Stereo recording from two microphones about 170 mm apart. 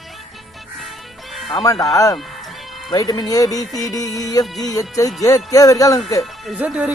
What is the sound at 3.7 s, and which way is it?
Speech, centre (ahead or behind).